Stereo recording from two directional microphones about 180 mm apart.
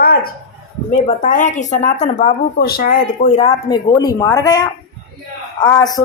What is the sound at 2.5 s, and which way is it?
Speech, 55° left (ahead or behind).